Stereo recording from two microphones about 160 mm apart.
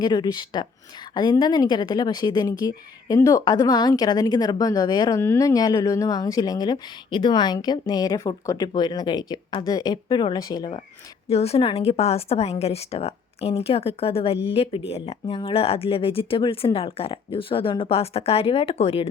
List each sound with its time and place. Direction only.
0.0 s speech: 25° left (ahead or behind)
11.3 s speech: 40° left (ahead or behind)